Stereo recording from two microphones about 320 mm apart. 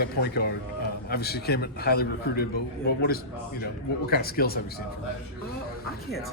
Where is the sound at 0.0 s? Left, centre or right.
Left.